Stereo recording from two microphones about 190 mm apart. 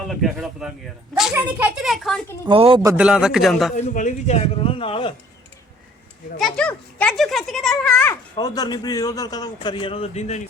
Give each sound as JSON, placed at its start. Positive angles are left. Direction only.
{"t": 0.1, "sound": "a man's voice", "side_deg": 0}
{"t": 2.5, "sound": "speech", "side_deg": -30}
{"t": 2.8, "sound": "a man's voice", "side_deg": -5}
{"t": 3.8, "sound": "speech", "side_deg": 40}
{"t": 6.4, "sound": "a child's voice", "side_deg": 5}